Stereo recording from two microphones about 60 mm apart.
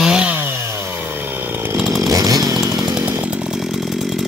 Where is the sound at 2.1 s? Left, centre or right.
Right.